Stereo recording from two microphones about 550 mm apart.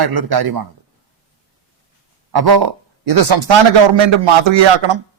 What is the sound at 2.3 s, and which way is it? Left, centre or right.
Speech, right.